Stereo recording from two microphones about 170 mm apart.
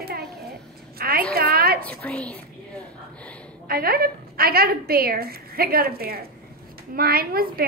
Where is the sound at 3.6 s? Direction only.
65° right (ahead or behind).